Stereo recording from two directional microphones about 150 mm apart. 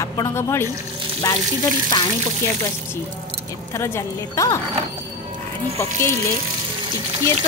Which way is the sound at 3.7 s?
20° left (ahead or behind).